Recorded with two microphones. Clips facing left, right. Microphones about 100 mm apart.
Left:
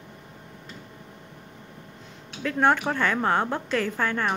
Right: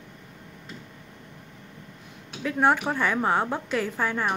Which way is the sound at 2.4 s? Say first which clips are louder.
Even; 5° right (ahead or behind).